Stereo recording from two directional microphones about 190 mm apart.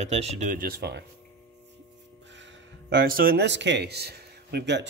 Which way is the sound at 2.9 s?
50° right (ahead or behind).